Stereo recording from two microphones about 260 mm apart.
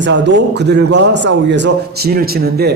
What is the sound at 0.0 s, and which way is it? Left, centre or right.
Speech, right.